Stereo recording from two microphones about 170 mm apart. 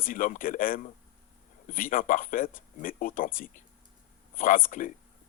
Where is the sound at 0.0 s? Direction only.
50° left (ahead or behind).